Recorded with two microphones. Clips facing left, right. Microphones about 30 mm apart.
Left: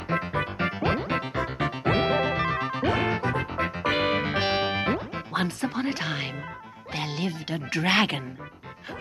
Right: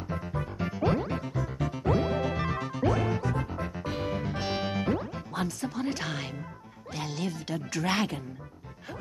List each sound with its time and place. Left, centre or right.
0.1 s music: left
2.2 s music: left
2.7 s music: left
3.5 s music: left
4.5 s music: left
5.9 s speech: left
7.9 s speech: left